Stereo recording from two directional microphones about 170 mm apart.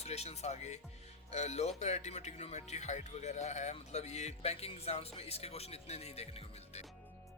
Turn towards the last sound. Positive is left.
turn(degrees=35)  # may be behind; listen again after turning